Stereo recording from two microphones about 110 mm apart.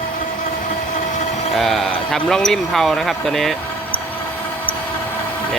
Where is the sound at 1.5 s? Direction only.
Centre (ahead or behind).